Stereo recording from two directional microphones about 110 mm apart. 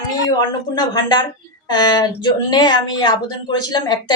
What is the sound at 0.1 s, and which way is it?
A woman's voice, 35° left (ahead or behind).